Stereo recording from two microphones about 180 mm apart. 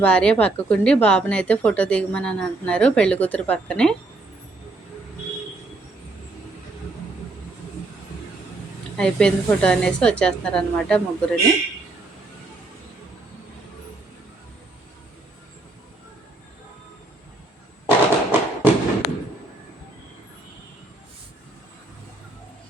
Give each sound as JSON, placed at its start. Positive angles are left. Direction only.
{"t": 0.0, "sound": "speech", "side_deg": 5}
{"t": 9.0, "sound": "speech", "side_deg": 5}
{"t": 17.8, "sound": "a sound", "side_deg": -10}